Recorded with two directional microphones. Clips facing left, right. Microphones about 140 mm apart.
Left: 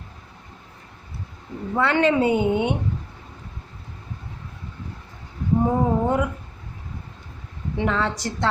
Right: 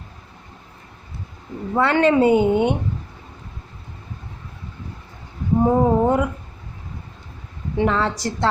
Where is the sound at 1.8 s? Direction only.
40° right (ahead or behind).